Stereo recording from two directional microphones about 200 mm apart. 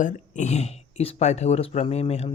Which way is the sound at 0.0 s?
40° left (ahead or behind).